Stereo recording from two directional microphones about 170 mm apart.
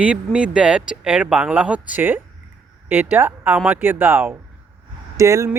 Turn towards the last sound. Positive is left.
turn(degrees=-20)  # may be behind; listen again after turning